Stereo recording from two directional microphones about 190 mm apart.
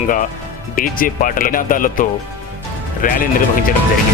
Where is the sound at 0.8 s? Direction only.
45° left (ahead or behind).